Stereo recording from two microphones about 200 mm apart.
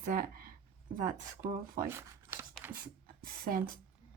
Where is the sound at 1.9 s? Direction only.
10° right (ahead or behind).